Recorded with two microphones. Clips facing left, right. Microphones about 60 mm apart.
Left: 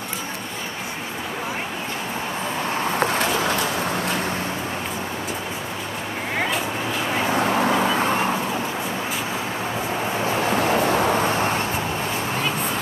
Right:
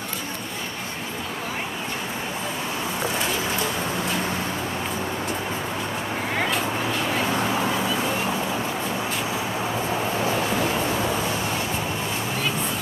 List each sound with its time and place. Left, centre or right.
3.0 s a sound: left
6.3 s vehicle: centre
7.4 s vehicle: left
10.2 s vehicle: left